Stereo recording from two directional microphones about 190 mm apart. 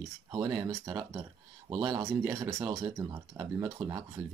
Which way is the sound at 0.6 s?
20° right (ahead or behind).